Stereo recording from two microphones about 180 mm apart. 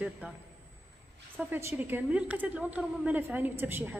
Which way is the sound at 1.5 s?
10° right (ahead or behind).